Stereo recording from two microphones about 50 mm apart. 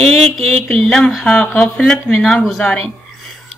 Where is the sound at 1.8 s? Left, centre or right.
Centre.